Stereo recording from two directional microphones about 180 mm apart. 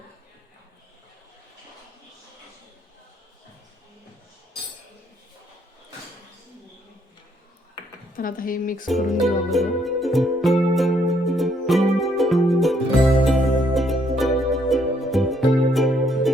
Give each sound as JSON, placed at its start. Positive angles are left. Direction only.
{"t": 8.1, "sound": "speech", "side_deg": 50}
{"t": 8.9, "sound": "music", "side_deg": 0}